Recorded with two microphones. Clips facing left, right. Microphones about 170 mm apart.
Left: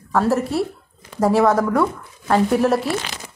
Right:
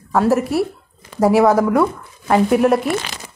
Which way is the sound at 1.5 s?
20° right (ahead or behind).